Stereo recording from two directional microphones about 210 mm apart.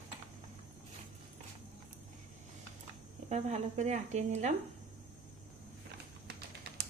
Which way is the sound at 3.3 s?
35° right (ahead or behind).